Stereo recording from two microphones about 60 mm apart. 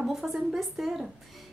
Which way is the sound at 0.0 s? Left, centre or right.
Centre.